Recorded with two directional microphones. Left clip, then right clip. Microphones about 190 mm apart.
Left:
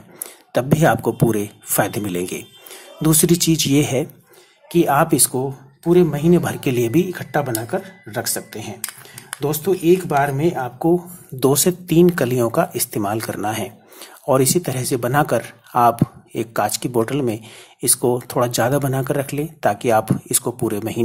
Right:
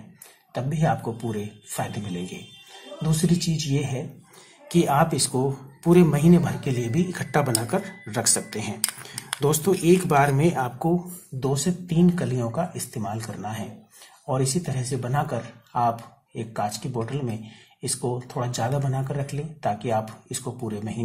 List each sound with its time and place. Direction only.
0.5 s speech: 35° left (ahead or behind)
4.6 s speech: 10° left (ahead or behind)
4.9 s speech: 25° left (ahead or behind)
5.4 s speech: 5° left (ahead or behind)
6.4 s speech: 30° left (ahead or behind)
7.1 s speech: 10° left (ahead or behind)
11.3 s speech: 35° left (ahead or behind)